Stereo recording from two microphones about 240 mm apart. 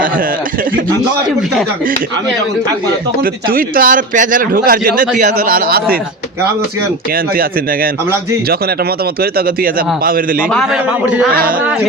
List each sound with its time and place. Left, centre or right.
3.5 s a man's voice: right
9.2 s a man's voice: right
10.5 s a man's voice: centre